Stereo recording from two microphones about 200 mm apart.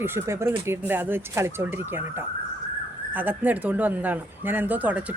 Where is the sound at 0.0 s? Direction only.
10° right (ahead or behind).